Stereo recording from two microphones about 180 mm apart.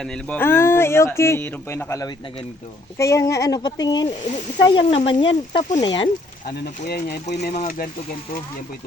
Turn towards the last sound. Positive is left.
turn(degrees=50)  # may be behind; listen again after turning